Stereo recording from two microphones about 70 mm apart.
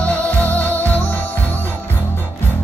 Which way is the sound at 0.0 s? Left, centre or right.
Centre.